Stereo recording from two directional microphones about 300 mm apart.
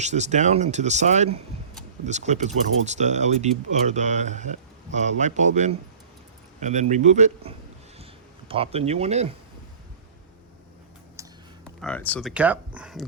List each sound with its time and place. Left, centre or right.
0.0 s speech: right
11.2 s tick: centre
11.6 s speech: centre